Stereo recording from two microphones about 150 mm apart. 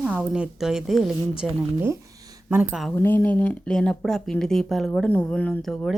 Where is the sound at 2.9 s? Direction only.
15° left (ahead or behind).